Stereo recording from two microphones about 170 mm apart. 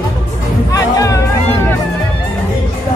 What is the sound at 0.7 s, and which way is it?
Music, 20° left (ahead or behind).